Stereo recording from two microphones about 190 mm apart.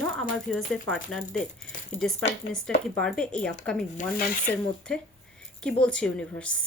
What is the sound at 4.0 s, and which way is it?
Speech, 45° left (ahead or behind).